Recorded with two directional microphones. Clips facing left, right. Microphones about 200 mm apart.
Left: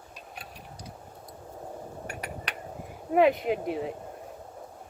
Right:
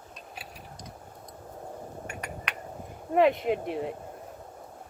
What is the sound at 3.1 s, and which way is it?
Speech, centre (ahead or behind).